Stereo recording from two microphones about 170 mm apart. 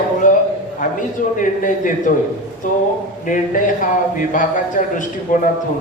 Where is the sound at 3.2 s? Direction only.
50° left (ahead or behind).